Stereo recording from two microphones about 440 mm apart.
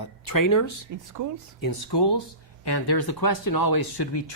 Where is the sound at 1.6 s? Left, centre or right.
Left.